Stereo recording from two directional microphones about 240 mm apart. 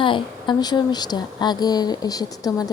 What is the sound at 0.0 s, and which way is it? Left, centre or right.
A woman's voice, centre.